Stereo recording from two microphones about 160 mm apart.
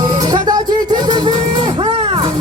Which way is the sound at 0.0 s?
25° right (ahead or behind).